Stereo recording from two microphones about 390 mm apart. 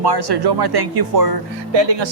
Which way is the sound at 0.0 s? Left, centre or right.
Right.